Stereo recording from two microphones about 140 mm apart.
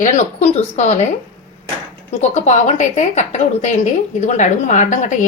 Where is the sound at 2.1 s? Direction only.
55° left (ahead or behind).